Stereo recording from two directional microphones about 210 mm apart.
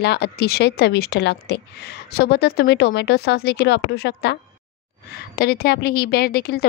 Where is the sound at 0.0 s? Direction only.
50° left (ahead or behind).